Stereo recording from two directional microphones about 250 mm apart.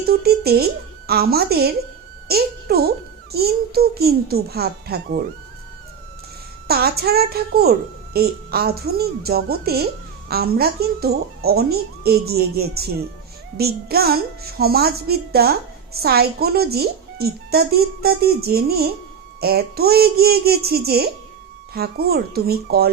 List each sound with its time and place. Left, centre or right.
0.1 s a child's voice: right
6.7 s a child's voice: right